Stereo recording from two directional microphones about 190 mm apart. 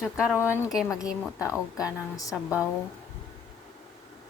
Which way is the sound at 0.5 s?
15° left (ahead or behind).